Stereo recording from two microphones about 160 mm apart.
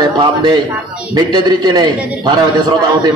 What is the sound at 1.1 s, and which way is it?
A man's voice, 25° right (ahead or behind).